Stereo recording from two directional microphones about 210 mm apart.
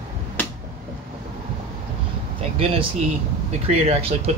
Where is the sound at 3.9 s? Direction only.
30° right (ahead or behind).